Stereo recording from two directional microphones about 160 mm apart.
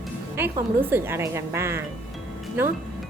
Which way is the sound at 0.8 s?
15° right (ahead or behind).